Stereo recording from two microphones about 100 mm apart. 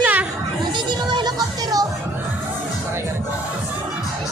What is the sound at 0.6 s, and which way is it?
Music, 50° right (ahead or behind).